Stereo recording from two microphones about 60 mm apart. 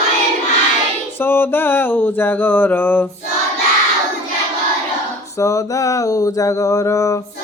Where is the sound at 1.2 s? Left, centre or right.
Left.